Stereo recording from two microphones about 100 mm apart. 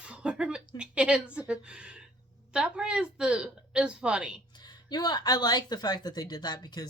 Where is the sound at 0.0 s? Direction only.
10° right (ahead or behind).